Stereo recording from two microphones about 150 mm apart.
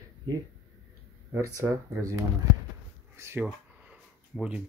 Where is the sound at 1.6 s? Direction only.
20° right (ahead or behind).